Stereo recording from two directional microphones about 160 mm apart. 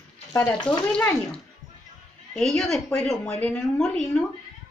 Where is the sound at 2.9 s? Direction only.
5° left (ahead or behind).